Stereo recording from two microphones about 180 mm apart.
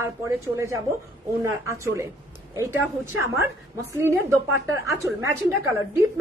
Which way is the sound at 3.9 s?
15° right (ahead or behind).